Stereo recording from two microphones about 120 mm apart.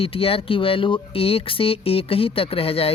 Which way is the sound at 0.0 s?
50° left (ahead or behind).